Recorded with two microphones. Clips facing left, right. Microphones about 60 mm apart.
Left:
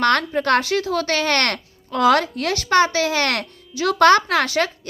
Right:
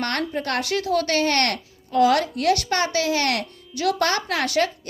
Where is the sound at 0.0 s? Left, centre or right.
Left.